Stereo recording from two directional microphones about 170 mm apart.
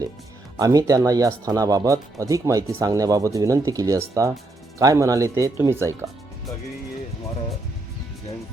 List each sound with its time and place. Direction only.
0.6 s speech: 20° right (ahead or behind)